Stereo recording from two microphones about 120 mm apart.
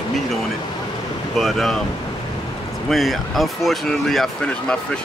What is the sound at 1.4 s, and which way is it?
Speech, centre (ahead or behind).